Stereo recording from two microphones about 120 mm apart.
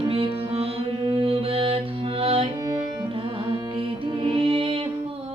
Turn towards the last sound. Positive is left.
turn(degrees=-45)  # may be behind; listen again after turning